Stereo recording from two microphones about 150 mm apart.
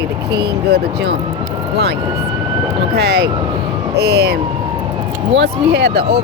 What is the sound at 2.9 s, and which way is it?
Speech, 90° right.